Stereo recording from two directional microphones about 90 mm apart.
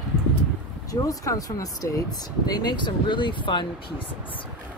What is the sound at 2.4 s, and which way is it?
Speech, 50° left (ahead or behind).